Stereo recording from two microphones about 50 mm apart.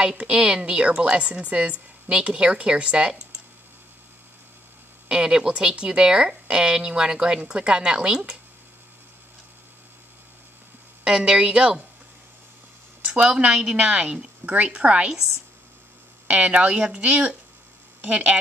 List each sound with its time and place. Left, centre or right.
0.0 s a woman's voice: centre
5.1 s speech: centre
11.1 s a woman's voice: centre
13.0 s a woman's voice: right
16.3 s a woman's voice: right